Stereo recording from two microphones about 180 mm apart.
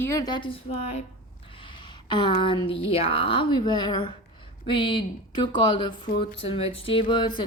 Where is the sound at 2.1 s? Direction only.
25° left (ahead or behind).